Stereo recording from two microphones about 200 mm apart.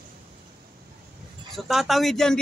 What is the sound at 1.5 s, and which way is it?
Speech, centre (ahead or behind).